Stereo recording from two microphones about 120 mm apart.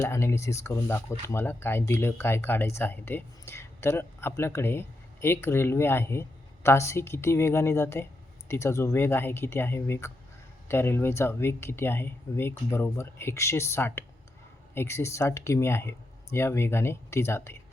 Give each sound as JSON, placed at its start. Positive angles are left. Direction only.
{"t": 0.0, "sound": "speech", "side_deg": 20}